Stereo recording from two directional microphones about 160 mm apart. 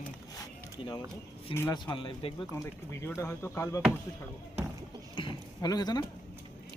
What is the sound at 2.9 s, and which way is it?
Speech, 15° left (ahead or behind).